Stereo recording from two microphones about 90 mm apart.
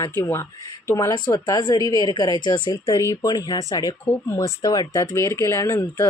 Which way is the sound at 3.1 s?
40° left (ahead or behind).